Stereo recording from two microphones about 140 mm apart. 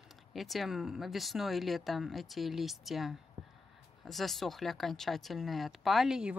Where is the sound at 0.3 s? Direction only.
Centre (ahead or behind).